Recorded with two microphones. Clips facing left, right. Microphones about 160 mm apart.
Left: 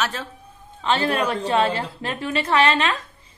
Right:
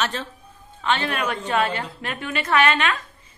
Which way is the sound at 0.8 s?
35° left (ahead or behind).